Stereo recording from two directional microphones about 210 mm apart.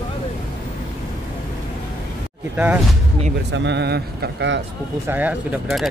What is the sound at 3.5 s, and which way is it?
Speech, 55° right (ahead or behind).